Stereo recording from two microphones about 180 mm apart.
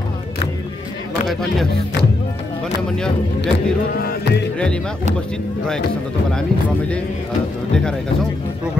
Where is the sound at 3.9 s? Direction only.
60° left (ahead or behind).